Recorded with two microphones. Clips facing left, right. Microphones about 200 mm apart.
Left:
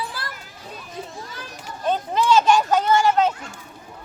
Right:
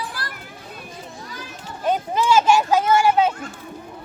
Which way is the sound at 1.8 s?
10° right (ahead or behind).